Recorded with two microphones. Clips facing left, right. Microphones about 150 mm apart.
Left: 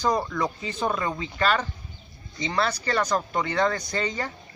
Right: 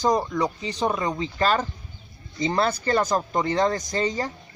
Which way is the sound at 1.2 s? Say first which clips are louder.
Right 3 dB; 35° right (ahead or behind).